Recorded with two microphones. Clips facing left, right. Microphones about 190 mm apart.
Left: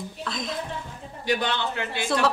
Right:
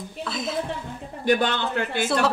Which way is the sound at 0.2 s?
5° right (ahead or behind).